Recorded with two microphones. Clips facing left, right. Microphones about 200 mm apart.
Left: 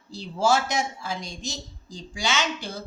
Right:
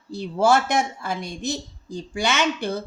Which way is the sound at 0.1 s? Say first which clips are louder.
Right 4 dB; 60° right (ahead or behind).